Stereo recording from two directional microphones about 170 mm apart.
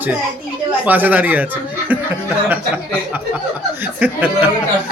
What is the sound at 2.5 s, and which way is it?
Speech, 10° right (ahead or behind).